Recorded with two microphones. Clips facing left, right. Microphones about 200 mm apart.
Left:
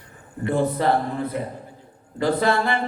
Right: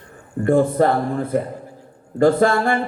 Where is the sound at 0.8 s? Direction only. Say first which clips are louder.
Right 2 dB; 50° right (ahead or behind).